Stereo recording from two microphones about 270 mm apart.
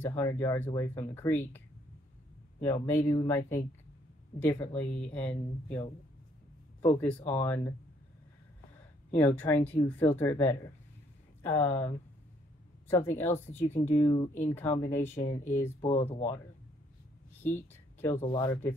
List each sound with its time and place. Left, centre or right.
0.0 s speech: centre
2.6 s speech: centre
9.1 s speech: centre; by 14.5 s left
14.5 s speech: centre
17.4 s a sound: centre
18.2 s speech: centre